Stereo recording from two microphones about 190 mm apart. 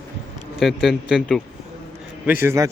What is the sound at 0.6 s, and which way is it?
A man's voice, centre (ahead or behind).